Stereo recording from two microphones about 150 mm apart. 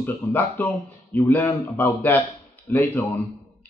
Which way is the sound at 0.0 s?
10° left (ahead or behind).